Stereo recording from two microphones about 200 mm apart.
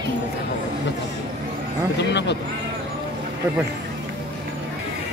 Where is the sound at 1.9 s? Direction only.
60° left (ahead or behind).